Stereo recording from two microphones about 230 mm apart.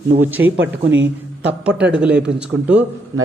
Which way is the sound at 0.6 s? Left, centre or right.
Right.